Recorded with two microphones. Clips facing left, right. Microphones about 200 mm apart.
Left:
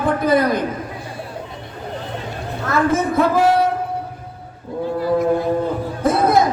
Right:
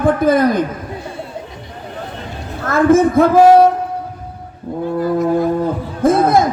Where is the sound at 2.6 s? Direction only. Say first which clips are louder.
Right 7 dB; 50° right (ahead or behind).